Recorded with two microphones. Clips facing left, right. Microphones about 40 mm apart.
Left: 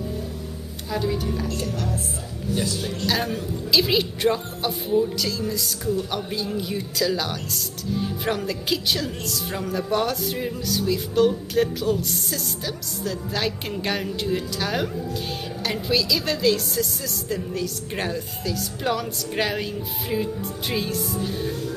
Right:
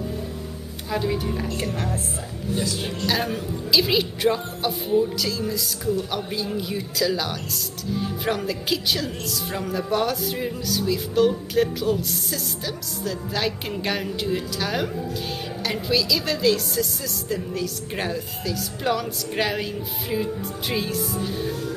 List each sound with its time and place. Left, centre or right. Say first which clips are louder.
0.8 s speech: right 1 dB; centre
1.6 s speech: right 1 dB; right
3.1 s speech: even; centre
20.7 s speech: even; centre